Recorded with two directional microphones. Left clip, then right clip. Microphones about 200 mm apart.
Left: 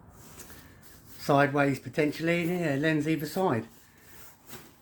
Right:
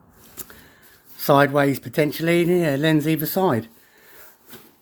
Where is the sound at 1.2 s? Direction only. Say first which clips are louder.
Right 8 dB; 60° right (ahead or behind).